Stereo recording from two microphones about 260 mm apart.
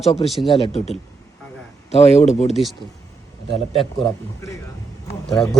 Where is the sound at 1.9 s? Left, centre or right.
Left.